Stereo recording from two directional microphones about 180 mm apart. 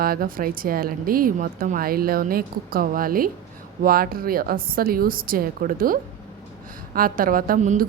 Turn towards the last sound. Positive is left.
turn(degrees=-45)  # may be behind; listen again after turning